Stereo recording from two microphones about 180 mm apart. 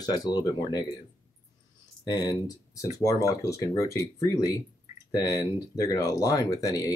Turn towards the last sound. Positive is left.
turn(degrees=20)  # may be behind; listen again after turning